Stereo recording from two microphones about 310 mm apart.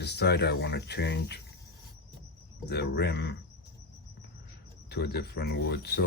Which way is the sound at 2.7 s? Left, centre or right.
Left.